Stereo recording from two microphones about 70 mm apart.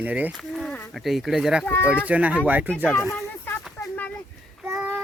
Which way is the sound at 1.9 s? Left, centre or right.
Centre.